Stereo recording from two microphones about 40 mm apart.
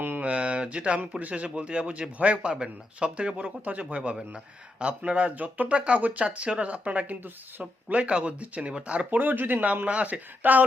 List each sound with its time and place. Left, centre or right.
0.2 s a sound: right
1.5 s speech: right
5.7 s speech: right
9.1 s speech: right
9.8 s speech: right